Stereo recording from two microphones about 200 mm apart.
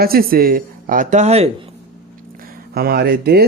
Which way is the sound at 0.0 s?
50° right (ahead or behind).